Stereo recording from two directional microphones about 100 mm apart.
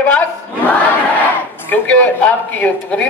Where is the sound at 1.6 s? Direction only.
15° left (ahead or behind).